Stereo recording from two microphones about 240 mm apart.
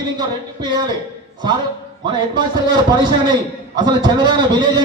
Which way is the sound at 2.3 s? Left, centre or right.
Centre.